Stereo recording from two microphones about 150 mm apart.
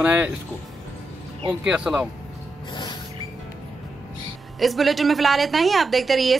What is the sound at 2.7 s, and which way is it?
Music, 30° left (ahead or behind).